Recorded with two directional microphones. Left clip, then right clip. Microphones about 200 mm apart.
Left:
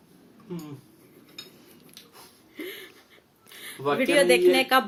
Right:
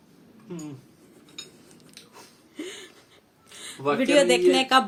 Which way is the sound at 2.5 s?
25° right (ahead or behind).